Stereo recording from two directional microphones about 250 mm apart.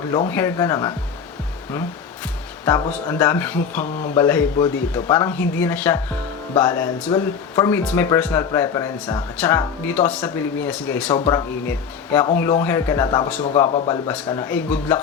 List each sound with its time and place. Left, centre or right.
0.3 s speech: centre
2.6 s speech: centre